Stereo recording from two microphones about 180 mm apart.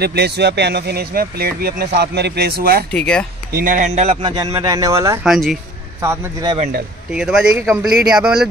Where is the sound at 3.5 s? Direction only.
50° right (ahead or behind).